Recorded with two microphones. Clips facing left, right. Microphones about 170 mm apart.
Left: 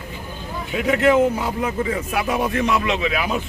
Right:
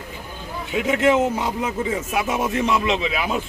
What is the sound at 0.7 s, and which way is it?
A man's voice, 20° right (ahead or behind).